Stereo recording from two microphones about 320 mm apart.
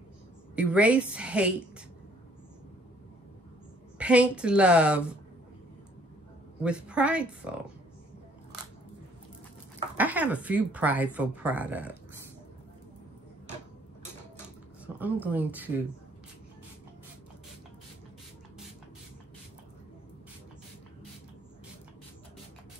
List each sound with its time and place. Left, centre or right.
0.6 s speech: centre
4.0 s speech: centre
6.6 s speech: centre
9.9 s speech: centre
15.0 s speech: centre